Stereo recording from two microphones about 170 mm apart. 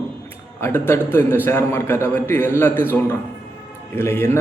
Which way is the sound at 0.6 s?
15° left (ahead or behind).